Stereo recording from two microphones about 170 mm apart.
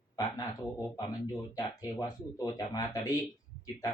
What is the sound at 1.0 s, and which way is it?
Speech, 25° left (ahead or behind).